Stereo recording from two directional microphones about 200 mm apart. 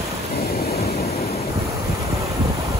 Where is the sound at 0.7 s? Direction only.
50° left (ahead or behind).